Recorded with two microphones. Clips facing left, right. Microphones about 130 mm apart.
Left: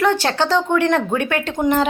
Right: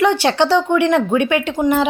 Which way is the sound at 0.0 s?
15° right (ahead or behind).